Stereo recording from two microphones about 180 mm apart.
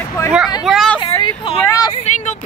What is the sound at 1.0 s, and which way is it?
Speech, 30° left (ahead or behind).